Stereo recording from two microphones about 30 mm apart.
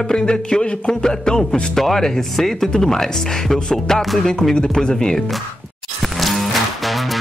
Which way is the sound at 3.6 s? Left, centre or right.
Centre.